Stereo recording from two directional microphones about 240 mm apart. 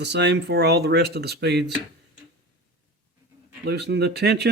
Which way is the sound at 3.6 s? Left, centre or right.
Right.